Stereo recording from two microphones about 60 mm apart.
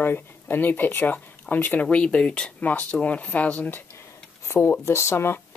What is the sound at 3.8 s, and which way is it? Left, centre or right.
Speech, left.